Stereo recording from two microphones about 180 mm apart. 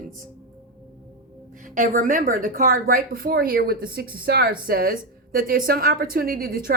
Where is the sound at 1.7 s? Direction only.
50° right (ahead or behind).